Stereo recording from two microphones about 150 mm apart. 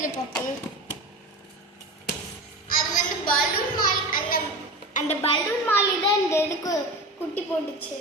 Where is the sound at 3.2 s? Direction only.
70° left (ahead or behind).